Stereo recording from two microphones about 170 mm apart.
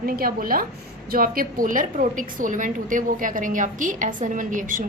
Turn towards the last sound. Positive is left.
turn(degrees=-50)  # may be behind; listen again after turning